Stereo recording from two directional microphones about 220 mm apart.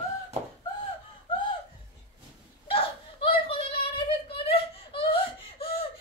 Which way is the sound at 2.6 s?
25° left (ahead or behind).